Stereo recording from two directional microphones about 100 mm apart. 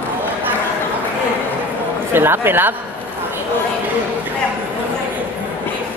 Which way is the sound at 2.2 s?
20° right (ahead or behind).